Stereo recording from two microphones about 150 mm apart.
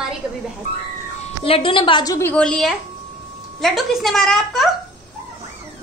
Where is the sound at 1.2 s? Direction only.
40° left (ahead or behind).